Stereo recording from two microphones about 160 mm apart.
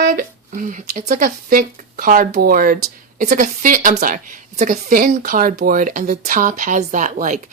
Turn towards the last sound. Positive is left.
turn(degrees=-50)  # may be behind; listen again after turning